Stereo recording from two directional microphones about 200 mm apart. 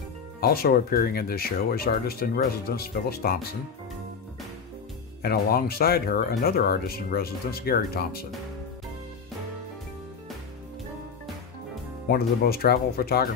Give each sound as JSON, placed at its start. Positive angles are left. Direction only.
{"t": 0.4, "sound": "speech", "side_deg": 50}
{"t": 5.2, "sound": "speech", "side_deg": 50}
{"t": 12.1, "sound": "speech", "side_deg": 50}